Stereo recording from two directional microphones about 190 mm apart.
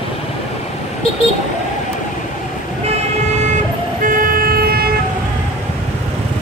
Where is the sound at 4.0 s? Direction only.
45° right (ahead or behind).